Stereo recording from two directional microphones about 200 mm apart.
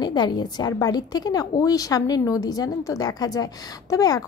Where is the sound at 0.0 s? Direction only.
20° left (ahead or behind).